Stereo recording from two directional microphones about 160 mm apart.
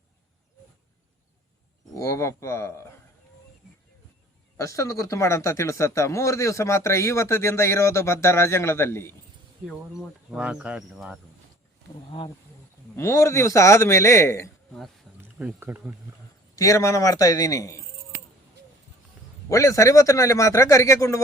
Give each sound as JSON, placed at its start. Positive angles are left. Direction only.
{"t": 1.9, "sound": "speech", "side_deg": 20}
{"t": 4.5, "sound": "speech", "side_deg": 20}
{"t": 9.6, "sound": "speech", "side_deg": -5}
{"t": 13.0, "sound": "speech", "side_deg": 15}
{"t": 15.2, "sound": "speech", "side_deg": -10}
{"t": 16.6, "sound": "a man's voice", "side_deg": 20}
{"t": 19.5, "sound": "a man's voice", "side_deg": 20}